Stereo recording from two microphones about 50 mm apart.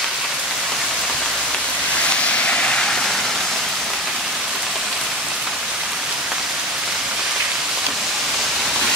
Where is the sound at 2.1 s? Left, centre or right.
Left; by 3.3 s centre.